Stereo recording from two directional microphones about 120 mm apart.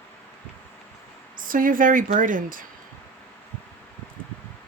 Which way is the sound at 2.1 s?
90° right.